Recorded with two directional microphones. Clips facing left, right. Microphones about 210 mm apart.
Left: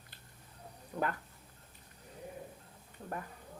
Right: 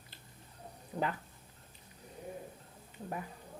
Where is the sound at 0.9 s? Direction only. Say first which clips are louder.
Even; 25° right (ahead or behind).